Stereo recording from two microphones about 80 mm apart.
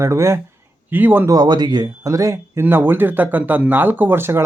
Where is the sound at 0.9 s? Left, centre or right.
Right.